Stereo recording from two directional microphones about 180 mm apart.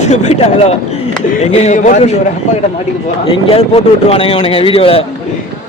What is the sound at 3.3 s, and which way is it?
A man's voice, 30° left (ahead or behind).